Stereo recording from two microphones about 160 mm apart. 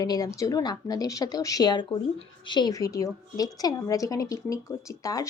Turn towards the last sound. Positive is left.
turn(degrees=20)  # may be behind; listen again after turning